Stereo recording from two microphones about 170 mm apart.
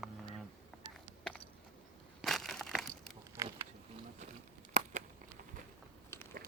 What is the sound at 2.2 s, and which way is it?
Crushing, centre (ahead or behind).